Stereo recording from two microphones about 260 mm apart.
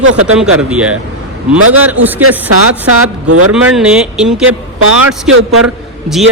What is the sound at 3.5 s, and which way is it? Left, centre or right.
Speech, centre.